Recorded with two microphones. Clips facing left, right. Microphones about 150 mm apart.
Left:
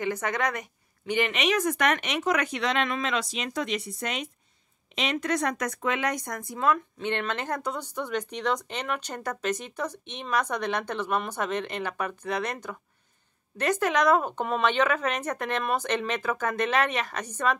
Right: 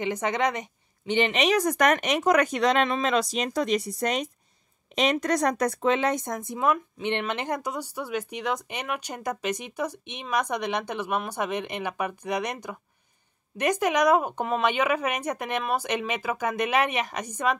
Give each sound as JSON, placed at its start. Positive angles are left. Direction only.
{"t": 0.0, "sound": "a woman's voice", "side_deg": -20}